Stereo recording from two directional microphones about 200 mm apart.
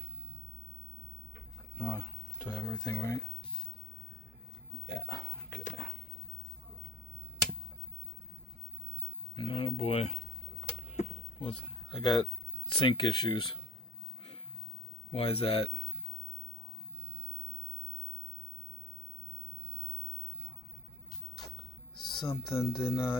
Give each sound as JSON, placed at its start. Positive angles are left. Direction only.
{"t": 1.8, "sound": "speech", "side_deg": 10}
{"t": 4.9, "sound": "speech", "side_deg": 15}
{"t": 9.3, "sound": "speech", "side_deg": 25}
{"t": 10.7, "sound": "a sound", "side_deg": 35}
{"t": 15.1, "sound": "speech", "side_deg": 30}
{"t": 22.1, "sound": "speech", "side_deg": 25}